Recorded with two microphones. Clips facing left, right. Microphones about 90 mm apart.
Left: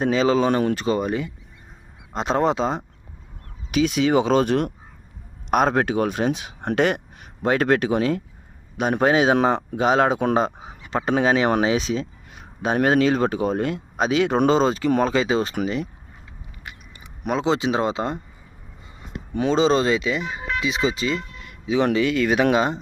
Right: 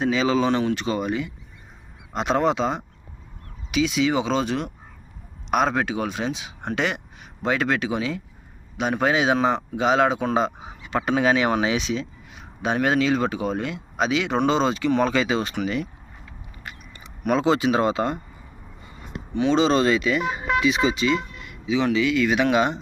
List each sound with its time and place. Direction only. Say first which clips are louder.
0.0 s speech: left 2 dB; 40° left (ahead or behind)
3.7 s speech: left 2 dB; 45° left (ahead or behind)
10.6 s speech: even; 30° left (ahead or behind)
16.6 s speech: right 1 dB; 15° left (ahead or behind)
19.3 s speech: even; 45° left (ahead or behind)
19.5 s speech: left 1 dB; 30° left (ahead or behind)